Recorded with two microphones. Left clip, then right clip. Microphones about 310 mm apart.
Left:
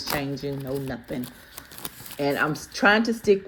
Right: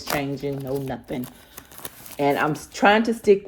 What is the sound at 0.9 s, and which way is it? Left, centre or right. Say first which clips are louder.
Speech: right 2 dB; right.